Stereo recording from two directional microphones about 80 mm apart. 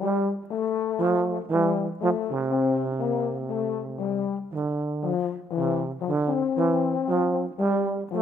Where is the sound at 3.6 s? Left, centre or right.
Left.